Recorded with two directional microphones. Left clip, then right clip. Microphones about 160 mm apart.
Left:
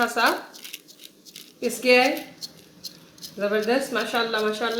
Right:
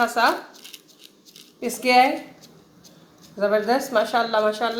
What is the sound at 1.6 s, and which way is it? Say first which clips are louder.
Speech: right 1 dB; 15° right (ahead or behind).